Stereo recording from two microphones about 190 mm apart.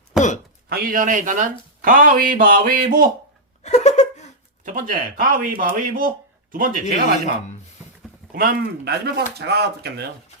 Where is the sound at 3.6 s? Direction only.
35° left (ahead or behind).